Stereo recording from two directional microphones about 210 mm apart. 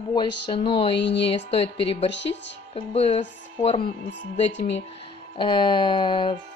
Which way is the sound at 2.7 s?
30° left (ahead or behind).